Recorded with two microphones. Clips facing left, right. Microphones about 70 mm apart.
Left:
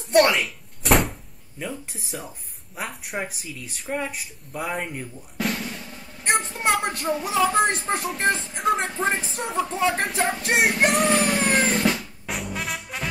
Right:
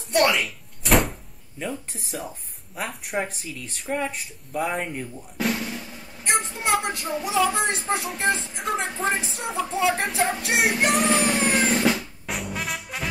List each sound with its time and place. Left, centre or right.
0.1 s door: centre
1.6 s speech: centre
6.6 s a sound: left
7.2 s speech: centre
10.9 s music: centre